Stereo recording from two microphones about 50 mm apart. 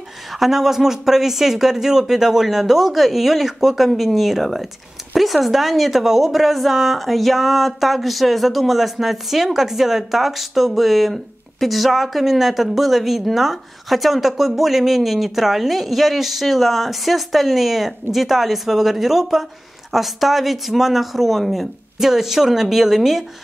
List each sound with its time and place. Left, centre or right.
0.3 s a woman's voice: centre